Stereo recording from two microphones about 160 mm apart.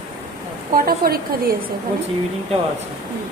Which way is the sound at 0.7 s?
65° right (ahead or behind).